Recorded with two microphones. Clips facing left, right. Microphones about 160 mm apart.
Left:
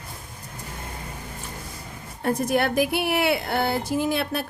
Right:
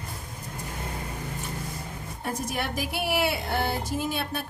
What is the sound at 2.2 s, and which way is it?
A woman's voice, 65° left (ahead or behind).